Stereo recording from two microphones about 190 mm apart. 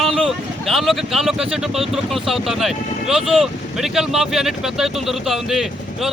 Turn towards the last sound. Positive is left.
turn(degrees=0)  # may be behind; listen again after turning